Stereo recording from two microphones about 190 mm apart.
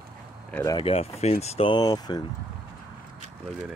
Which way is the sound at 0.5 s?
15° left (ahead or behind).